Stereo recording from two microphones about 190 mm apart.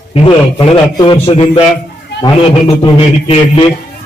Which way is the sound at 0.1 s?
30° left (ahead or behind).